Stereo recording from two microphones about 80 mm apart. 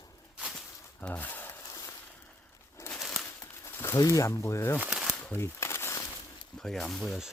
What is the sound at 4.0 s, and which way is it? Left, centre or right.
Speech, left.